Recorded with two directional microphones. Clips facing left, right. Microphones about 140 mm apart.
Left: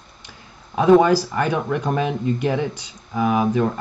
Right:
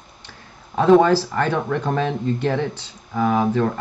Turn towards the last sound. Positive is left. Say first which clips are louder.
# even
turn(degrees=10)  # may be behind; listen again after turning